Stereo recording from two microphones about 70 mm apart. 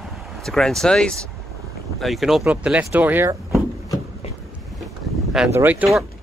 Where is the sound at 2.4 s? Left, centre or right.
Centre.